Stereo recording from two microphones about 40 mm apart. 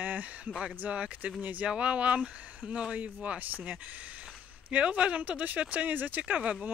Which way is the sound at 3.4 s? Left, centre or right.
Right.